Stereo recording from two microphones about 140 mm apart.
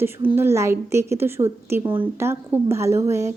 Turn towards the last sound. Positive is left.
turn(degrees=-20)  # may be behind; listen again after turning